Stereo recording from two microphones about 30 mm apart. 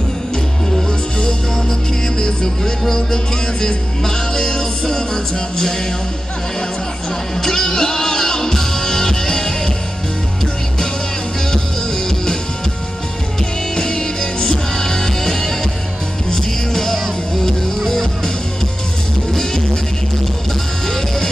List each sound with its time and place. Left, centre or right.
1.2 s music: left
7.4 s music: centre
13.7 s music: left
19.3 s music: centre